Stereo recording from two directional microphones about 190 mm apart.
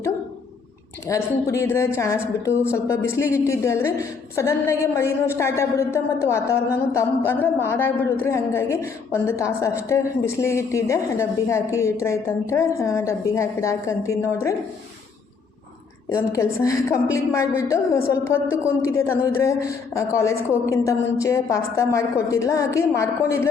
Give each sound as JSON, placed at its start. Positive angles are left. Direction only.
{"t": 1.0, "sound": "a man's voice", "side_deg": 15}
{"t": 16.0, "sound": "a man's voice", "side_deg": 15}